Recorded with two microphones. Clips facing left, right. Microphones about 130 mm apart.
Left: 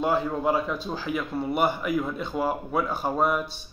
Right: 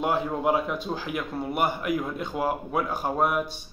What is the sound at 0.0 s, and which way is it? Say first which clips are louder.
A man's voice: left 1 dB; 15° right (ahead or behind).